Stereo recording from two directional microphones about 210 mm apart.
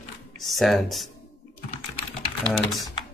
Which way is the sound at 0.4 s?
Centre (ahead or behind).